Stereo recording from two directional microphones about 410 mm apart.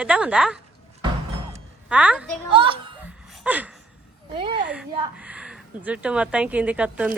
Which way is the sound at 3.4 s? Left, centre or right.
Centre.